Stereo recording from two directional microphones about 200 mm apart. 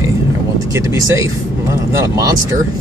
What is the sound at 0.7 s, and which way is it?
Speech, 15° right (ahead or behind).